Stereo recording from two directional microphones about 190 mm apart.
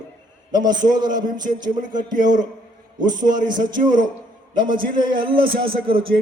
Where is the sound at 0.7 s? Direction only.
20° right (ahead or behind).